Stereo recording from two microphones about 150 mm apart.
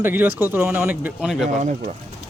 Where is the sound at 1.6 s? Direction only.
55° right (ahead or behind).